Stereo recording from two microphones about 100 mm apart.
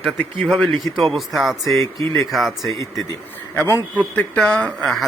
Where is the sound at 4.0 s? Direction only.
15° left (ahead or behind).